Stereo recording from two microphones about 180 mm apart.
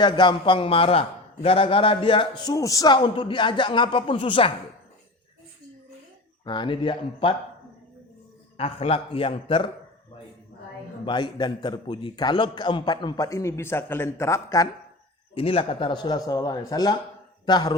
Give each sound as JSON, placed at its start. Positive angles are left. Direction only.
{"t": 0.0, "sound": "a man's voice", "side_deg": 25}
{"t": 6.4, "sound": "a man's voice", "side_deg": 25}
{"t": 8.5, "sound": "a man's voice", "side_deg": 35}
{"t": 11.0, "sound": "a man's voice", "side_deg": 25}
{"t": 15.4, "sound": "a man's voice", "side_deg": 30}